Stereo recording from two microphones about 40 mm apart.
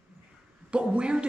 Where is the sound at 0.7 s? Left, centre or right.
Right.